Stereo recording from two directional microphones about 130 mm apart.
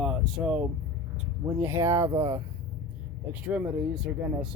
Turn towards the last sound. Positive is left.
turn(degrees=-5)  # may be behind; listen again after turning